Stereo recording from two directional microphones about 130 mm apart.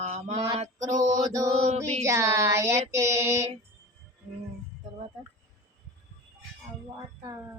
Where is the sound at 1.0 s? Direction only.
30° right (ahead or behind).